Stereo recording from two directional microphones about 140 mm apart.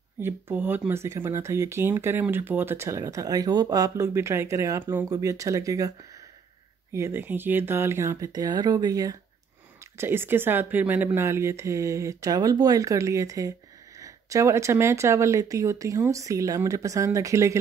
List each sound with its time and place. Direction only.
0.2 s speech: 15° right (ahead or behind)